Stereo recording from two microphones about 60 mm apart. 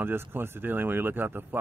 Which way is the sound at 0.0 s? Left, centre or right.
Right.